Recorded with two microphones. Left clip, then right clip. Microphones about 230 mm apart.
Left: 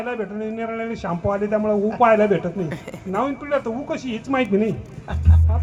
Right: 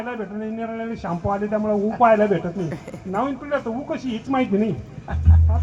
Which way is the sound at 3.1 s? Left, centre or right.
Left.